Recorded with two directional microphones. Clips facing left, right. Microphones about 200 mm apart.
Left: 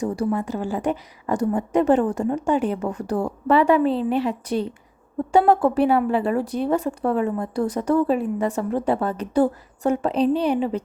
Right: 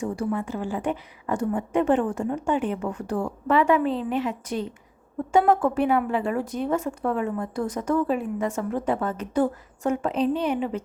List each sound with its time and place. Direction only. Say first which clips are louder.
0.0 s a woman's voice: left 4 dB; 40° left (ahead or behind)